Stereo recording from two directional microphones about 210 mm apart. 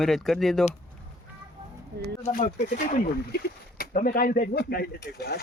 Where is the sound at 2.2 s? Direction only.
40° left (ahead or behind).